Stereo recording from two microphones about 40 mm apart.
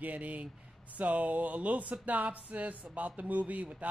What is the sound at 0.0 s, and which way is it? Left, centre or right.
Speech, right.